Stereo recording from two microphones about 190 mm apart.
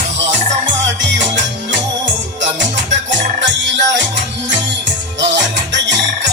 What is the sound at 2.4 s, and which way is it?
Music, 70° right (ahead or behind).